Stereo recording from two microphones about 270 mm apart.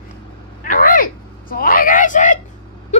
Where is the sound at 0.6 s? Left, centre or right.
Left.